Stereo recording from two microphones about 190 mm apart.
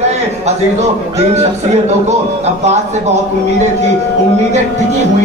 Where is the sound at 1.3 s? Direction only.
35° right (ahead or behind).